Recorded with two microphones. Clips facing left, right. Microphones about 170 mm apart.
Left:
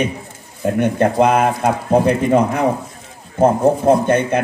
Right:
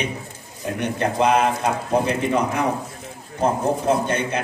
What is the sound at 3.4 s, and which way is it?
Speech, 55° left (ahead or behind).